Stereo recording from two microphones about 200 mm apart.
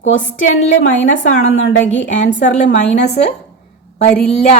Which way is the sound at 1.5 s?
75° left (ahead or behind).